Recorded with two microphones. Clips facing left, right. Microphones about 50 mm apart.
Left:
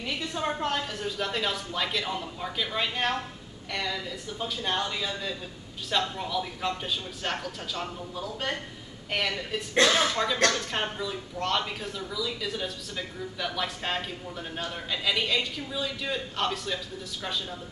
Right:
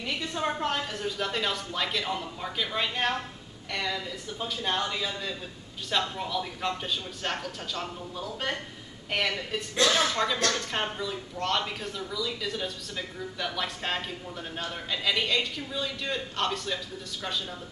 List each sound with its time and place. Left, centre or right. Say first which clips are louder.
0.0 s speech: even; centre